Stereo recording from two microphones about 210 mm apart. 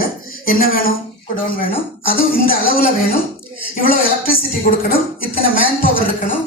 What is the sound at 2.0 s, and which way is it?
Speech, 45° left (ahead or behind).